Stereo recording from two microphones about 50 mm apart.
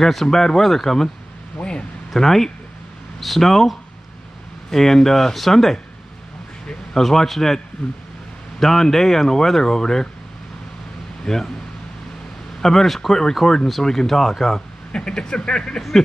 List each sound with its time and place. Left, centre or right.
0.0 s speech: centre
1.6 s a sound: left
2.1 s speech: centre
6.9 s speech: centre
11.2 s speech: centre
12.6 s speech: centre
14.9 s speech: centre